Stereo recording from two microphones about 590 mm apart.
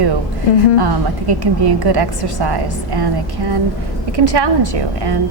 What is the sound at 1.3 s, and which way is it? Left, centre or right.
A woman's voice, right.